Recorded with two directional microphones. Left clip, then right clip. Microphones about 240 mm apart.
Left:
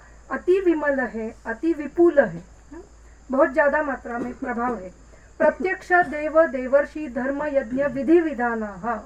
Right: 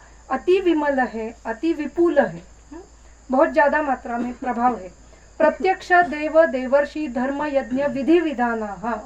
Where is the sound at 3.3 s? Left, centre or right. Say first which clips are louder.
Right 2 dB; right.